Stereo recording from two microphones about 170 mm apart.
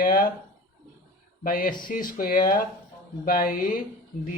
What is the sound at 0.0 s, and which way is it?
Speech, 55° left (ahead or behind).